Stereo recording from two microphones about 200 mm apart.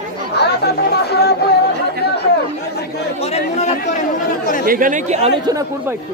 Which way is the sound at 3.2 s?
30° left (ahead or behind).